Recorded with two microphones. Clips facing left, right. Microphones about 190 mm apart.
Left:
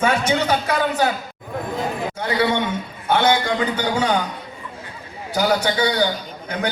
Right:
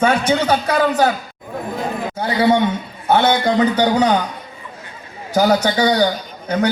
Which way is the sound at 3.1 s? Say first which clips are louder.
Right 3 dB; 40° right (ahead or behind).